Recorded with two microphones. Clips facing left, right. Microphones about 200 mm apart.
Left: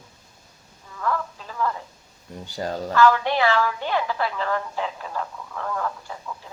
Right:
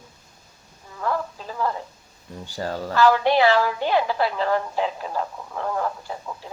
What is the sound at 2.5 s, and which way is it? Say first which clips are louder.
Speech: even; 20° left (ahead or behind).